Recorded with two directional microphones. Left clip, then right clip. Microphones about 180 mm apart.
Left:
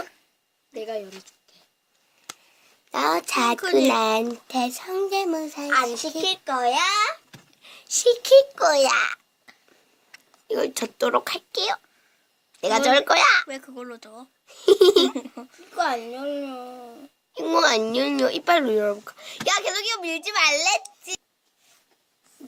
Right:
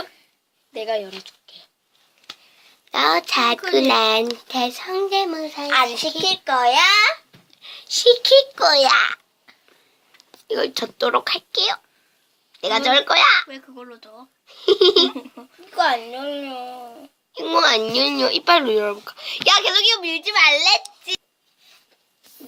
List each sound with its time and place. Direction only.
0.7 s speech: 5° left (ahead or behind)
2.9 s speech: 40° left (ahead or behind)
5.6 s speech: 5° left (ahead or behind)
5.9 s a woman's voice: 15° left (ahead or behind)
6.2 s a child's voice: 25° left (ahead or behind)
13.5 s speech: 55° left (ahead or behind)
14.4 s speech: 35° left (ahead or behind)
15.2 s babbling: 50° left (ahead or behind)
15.7 s speech: 25° left (ahead or behind)
17.3 s speech: 35° left (ahead or behind)